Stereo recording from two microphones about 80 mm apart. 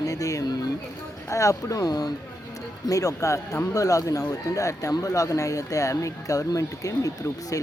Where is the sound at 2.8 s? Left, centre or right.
Left.